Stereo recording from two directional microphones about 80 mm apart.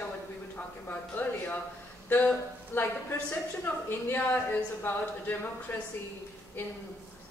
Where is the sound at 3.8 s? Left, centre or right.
Left.